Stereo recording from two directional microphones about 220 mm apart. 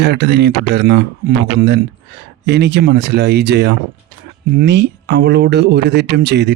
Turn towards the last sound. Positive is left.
turn(degrees=-50)  # may be behind; listen again after turning